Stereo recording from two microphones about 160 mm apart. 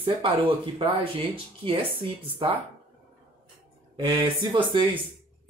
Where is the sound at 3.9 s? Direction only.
30° right (ahead or behind).